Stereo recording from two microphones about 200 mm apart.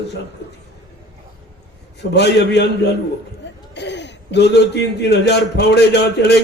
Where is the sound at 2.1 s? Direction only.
60° left (ahead or behind).